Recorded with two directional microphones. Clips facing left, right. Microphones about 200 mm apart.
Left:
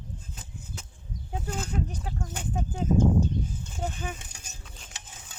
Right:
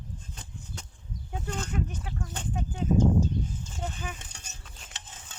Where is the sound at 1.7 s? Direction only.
35° left (ahead or behind); by 3.7 s 55° left (ahead or behind).